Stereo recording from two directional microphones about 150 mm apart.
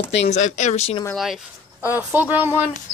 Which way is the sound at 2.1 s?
10° right (ahead or behind).